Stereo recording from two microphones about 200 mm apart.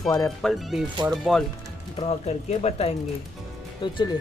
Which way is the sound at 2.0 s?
30° left (ahead or behind).